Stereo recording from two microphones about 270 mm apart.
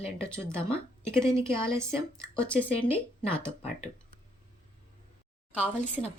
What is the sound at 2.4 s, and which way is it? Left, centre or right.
Speech, centre.